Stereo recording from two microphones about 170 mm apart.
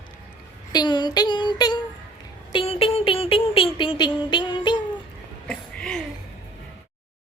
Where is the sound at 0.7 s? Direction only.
25° left (ahead or behind).